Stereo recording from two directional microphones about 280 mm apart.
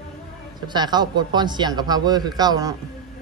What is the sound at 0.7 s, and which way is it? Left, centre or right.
A man's voice, centre.